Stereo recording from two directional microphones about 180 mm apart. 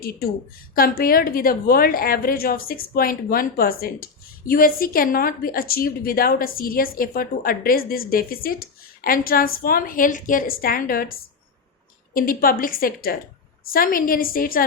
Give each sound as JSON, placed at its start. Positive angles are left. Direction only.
{"t": 0.0, "sound": "a woman's voice", "side_deg": 55}
{"t": 12.1, "sound": "a woman's voice", "side_deg": 50}